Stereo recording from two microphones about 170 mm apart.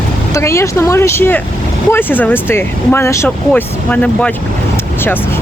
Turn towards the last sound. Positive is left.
turn(degrees=5)  # may be behind; listen again after turning